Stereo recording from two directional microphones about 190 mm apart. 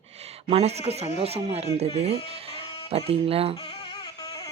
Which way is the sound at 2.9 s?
30° right (ahead or behind).